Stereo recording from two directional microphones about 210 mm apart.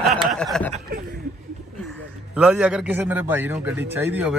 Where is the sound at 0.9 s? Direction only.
45° right (ahead or behind).